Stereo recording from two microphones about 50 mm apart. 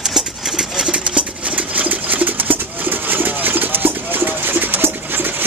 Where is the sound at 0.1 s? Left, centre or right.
Centre.